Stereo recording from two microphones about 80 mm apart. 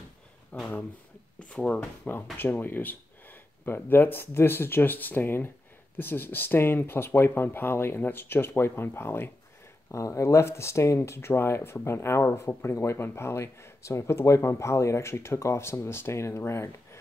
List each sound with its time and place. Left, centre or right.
0.5 s speech: left
2.3 s speech: left